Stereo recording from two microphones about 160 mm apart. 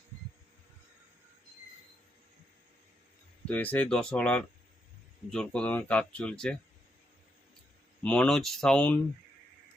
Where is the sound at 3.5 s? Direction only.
10° left (ahead or behind).